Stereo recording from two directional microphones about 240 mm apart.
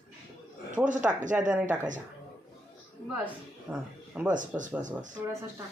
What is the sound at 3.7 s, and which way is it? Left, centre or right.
Speech, centre.